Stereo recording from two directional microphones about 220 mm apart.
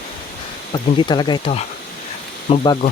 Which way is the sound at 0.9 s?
20° left (ahead or behind).